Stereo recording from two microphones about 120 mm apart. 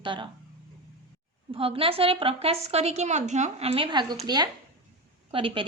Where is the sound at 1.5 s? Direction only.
50° right (ahead or behind).